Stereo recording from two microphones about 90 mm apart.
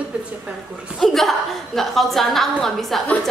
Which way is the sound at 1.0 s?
Centre (ahead or behind).